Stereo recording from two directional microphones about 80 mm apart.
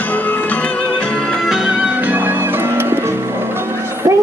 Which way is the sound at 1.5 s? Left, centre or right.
Centre.